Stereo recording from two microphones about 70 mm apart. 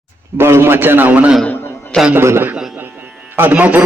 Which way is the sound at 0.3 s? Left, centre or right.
Right.